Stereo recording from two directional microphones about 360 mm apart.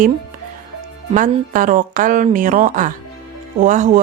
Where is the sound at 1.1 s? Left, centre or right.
Right.